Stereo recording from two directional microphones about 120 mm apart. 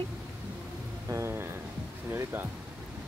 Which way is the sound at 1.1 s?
20° right (ahead or behind).